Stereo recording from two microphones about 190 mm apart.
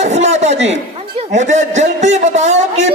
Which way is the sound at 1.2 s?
40° right (ahead or behind).